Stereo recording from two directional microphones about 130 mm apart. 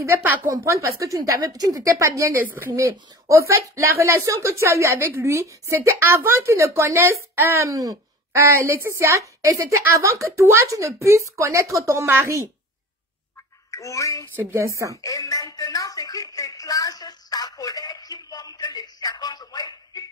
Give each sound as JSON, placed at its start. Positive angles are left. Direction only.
{"t": 0.0, "sound": "a woman's voice", "side_deg": -15}
{"t": 13.7, "sound": "speech", "side_deg": 25}
{"t": 14.3, "sound": "a woman's voice", "side_deg": -15}
{"t": 15.0, "sound": "a sound", "side_deg": 25}